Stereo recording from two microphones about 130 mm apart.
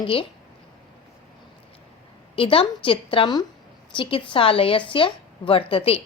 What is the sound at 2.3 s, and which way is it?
A woman's voice, 45° left (ahead or behind).